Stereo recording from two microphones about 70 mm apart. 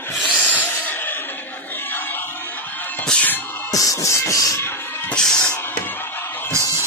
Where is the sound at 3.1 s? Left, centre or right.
Centre.